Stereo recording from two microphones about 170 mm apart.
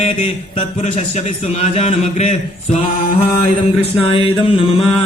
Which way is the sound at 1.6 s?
40° left (ahead or behind).